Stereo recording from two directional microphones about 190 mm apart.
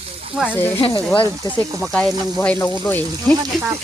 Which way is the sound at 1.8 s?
Centre (ahead or behind).